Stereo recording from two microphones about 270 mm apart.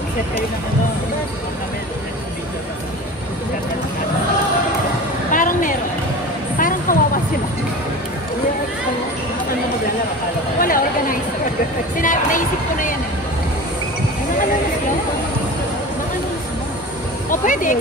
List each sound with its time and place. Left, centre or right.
5.3 s a sound: left
6.9 s vehicle: left
10.6 s a woman's voice: left
17.3 s speech: left